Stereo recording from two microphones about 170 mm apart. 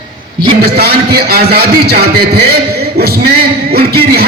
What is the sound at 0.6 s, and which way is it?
A man's voice, 65° right (ahead or behind).